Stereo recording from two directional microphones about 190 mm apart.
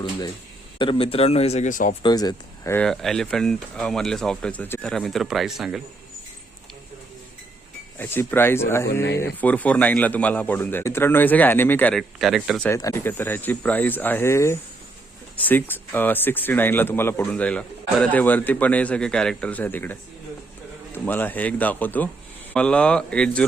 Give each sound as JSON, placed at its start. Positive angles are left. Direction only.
{"t": 0.8, "sound": "a man's voice", "side_deg": 30}
{"t": 2.0, "sound": "speech", "side_deg": 20}
{"t": 2.7, "sound": "speech", "side_deg": 5}
{"t": 7.9, "sound": "speech", "side_deg": 10}
{"t": 12.6, "sound": "speech", "side_deg": 15}